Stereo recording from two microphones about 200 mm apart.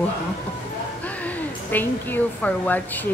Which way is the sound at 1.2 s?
10° left (ahead or behind).